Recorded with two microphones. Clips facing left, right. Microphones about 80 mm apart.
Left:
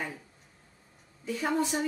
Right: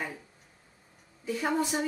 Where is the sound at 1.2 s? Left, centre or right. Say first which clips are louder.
Even; centre.